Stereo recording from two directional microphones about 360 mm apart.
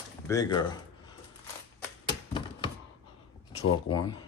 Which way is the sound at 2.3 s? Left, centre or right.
Centre.